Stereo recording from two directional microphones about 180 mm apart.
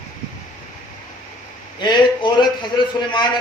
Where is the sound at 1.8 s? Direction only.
25° left (ahead or behind).